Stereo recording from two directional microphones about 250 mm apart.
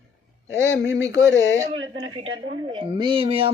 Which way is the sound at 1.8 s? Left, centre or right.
Right.